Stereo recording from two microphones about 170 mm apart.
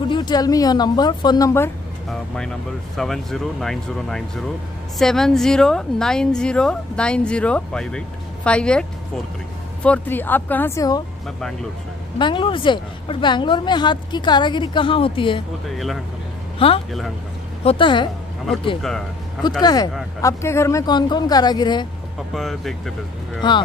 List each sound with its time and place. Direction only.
0.1 s a woman's voice: 25° left (ahead or behind)
2.0 s a woman's voice: 5° left (ahead or behind)
9.8 s speech: 10° left (ahead or behind)
12.2 s a woman's voice: 30° left (ahead or behind)
16.5 s a woman's voice: 35° left (ahead or behind)
18.8 s a woman's voice: centre (ahead or behind)
19.6 s a woman's voice: 25° left (ahead or behind)
22.3 s a woman's voice: centre (ahead or behind)